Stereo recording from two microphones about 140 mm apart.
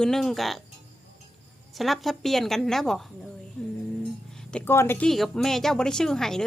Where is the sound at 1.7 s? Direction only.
Centre (ahead or behind).